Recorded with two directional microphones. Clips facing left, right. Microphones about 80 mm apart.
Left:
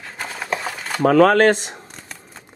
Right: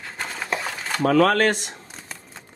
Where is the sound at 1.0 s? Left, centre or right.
Left.